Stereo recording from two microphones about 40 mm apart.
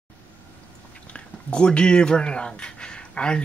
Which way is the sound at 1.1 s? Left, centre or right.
Left.